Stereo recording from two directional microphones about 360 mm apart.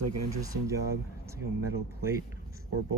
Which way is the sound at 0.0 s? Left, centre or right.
Right.